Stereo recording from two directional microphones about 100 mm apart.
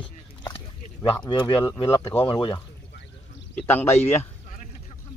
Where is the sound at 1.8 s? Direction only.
30° left (ahead or behind).